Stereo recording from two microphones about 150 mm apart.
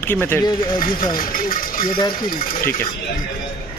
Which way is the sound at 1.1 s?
70° left (ahead or behind).